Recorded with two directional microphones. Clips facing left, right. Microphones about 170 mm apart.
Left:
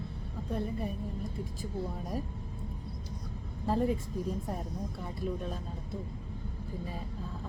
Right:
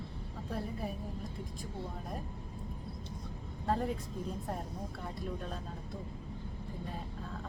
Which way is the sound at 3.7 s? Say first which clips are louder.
Left 4 dB; centre (ahead or behind).